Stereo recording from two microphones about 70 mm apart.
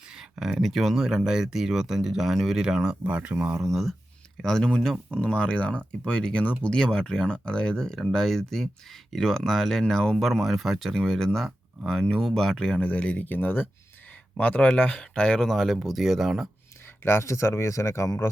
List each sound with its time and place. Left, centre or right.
0.1 s speech: centre
3.0 s speech: right
3.7 s speech: centre
17.0 s speech: left